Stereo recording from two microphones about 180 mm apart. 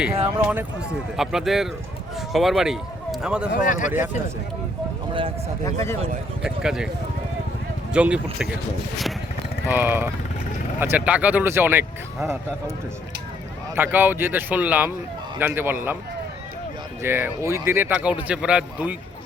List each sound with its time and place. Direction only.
0.3 s speech: 10° right (ahead or behind)
3.5 s speech: 45° left (ahead or behind)
5.6 s speech: 15° left (ahead or behind)
6.4 s speech: 5° right (ahead or behind)
7.9 s speech: 5° right (ahead or behind)
9.6 s speech: 10° right (ahead or behind)
13.7 s speech: 10° right (ahead or behind)
17.0 s speech: 10° right (ahead or behind)